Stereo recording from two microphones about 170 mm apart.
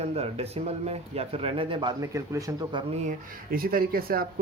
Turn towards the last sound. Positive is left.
turn(degrees=-60)  # may be behind; listen again after turning